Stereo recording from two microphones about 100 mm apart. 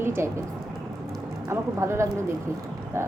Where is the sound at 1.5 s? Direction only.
25° right (ahead or behind).